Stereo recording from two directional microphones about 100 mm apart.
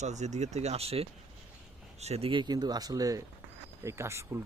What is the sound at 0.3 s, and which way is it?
Speech, 90° right.